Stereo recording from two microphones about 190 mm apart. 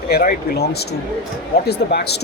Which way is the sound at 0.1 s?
50° left (ahead or behind).